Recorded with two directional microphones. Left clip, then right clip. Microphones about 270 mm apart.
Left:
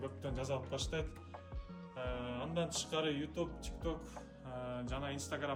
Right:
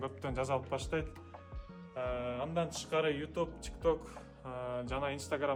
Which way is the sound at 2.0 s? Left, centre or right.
Centre.